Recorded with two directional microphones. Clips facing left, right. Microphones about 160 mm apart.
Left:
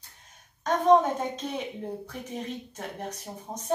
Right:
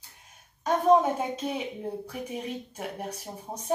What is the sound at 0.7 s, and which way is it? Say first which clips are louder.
Speech: left 1 dB; 10° right (ahead or behind).